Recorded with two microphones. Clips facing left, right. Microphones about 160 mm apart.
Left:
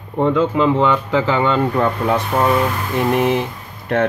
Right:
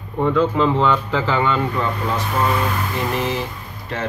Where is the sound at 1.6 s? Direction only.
55° left (ahead or behind).